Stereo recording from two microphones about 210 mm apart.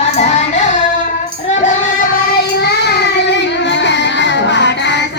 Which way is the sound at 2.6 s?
50° left (ahead or behind).